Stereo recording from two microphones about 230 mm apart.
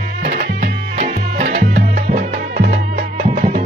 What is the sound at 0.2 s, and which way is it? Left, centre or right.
Music, right.